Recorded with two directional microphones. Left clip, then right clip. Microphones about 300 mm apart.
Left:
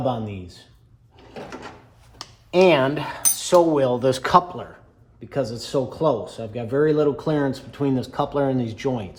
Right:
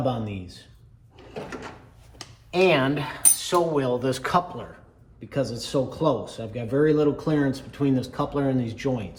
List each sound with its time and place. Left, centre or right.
2.1 s speech: left
5.3 s speech: centre